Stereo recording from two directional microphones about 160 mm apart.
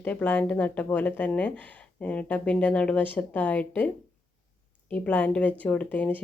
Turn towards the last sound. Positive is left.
turn(degrees=10)  # may be behind; listen again after turning